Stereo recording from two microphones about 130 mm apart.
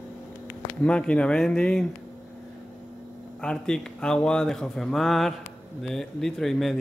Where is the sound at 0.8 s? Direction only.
10° left (ahead or behind).